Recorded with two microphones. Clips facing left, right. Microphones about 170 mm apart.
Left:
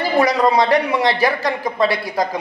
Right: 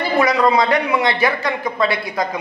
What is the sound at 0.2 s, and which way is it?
A man's voice, 40° left (ahead or behind).